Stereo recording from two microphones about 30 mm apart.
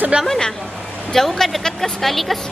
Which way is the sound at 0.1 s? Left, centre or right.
Right.